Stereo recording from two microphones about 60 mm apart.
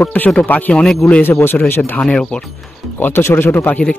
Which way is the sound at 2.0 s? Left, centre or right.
Centre.